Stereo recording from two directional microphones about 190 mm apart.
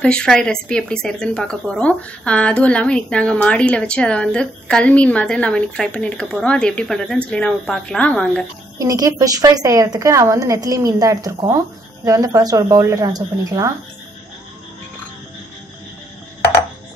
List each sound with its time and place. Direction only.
0.0 s speech: 5° left (ahead or behind)
8.7 s a woman's voice: 20° right (ahead or behind)